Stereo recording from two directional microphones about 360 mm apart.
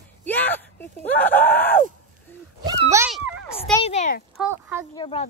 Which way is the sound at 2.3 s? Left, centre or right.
Centre.